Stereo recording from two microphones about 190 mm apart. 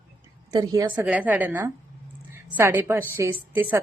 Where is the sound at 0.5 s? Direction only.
20° right (ahead or behind).